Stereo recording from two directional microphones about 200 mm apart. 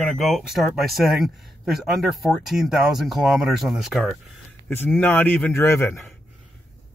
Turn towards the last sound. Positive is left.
turn(degrees=10)  # may be behind; listen again after turning